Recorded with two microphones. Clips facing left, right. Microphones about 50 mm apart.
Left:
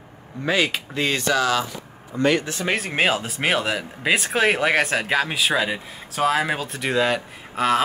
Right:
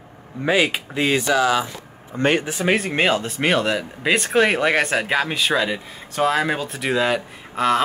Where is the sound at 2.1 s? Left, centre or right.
Right.